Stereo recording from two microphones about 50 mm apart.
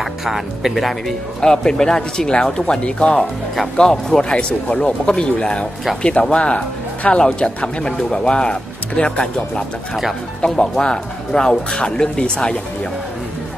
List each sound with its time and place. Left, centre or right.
0.0 s speech: centre
1.4 s speech: centre
3.7 s speech: centre
4.2 s speech: left